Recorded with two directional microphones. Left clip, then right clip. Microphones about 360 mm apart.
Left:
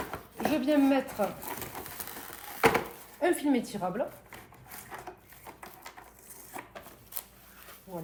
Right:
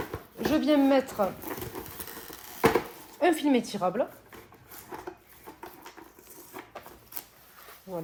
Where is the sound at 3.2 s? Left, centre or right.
Right.